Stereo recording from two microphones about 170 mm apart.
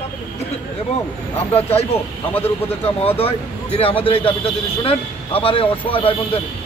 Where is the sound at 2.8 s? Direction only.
35° left (ahead or behind).